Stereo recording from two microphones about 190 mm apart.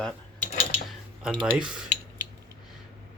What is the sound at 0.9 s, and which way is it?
Speech, centre (ahead or behind).